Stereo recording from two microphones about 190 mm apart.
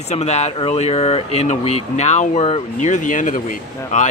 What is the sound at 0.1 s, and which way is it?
Speech, 35° left (ahead or behind).